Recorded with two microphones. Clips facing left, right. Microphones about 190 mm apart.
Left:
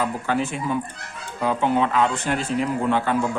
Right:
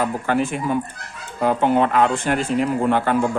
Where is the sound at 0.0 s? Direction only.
50° right (ahead or behind).